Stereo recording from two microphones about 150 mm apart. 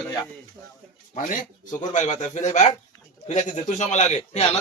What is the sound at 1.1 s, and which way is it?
A man's voice, 60° left (ahead or behind).